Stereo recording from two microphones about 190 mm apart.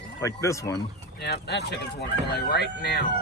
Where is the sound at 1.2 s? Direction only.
60° left (ahead or behind).